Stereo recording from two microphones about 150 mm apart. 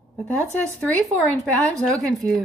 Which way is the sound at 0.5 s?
10° left (ahead or behind).